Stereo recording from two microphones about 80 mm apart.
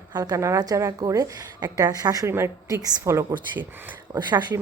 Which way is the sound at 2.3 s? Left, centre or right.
Right.